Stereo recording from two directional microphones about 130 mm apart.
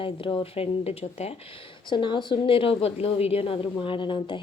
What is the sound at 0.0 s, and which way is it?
Speech, 40° left (ahead or behind).